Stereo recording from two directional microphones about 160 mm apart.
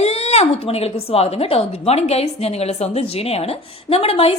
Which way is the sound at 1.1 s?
40° left (ahead or behind).